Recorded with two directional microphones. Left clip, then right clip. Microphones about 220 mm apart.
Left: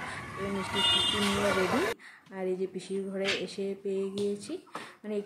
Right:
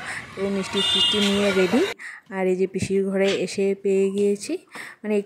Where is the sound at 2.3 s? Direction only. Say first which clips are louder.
Right 10 dB; 45° right (ahead or behind).